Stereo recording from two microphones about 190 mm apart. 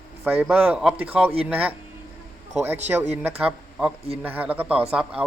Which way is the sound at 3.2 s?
10° right (ahead or behind).